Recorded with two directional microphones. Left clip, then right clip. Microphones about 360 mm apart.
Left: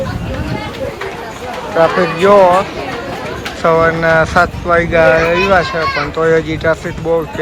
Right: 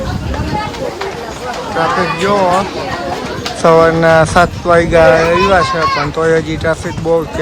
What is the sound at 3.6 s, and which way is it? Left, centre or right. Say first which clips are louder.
Speech: right 3 dB; centre.